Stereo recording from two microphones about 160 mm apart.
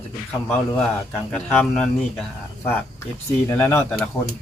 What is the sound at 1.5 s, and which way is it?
Speech, 5° left (ahead or behind).